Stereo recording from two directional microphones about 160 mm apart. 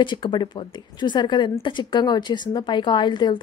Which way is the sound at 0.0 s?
30° left (ahead or behind).